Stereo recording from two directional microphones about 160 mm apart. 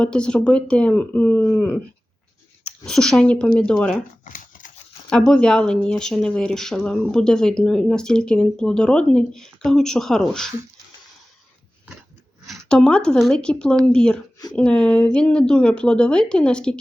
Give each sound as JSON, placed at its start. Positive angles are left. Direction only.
{"t": 0.0, "sound": "speech", "side_deg": 5}
{"t": 2.8, "sound": "speech", "side_deg": 5}
{"t": 4.2, "sound": "a sound", "side_deg": 55}
{"t": 5.0, "sound": "speech", "side_deg": 5}
{"t": 12.5, "sound": "speech", "side_deg": 5}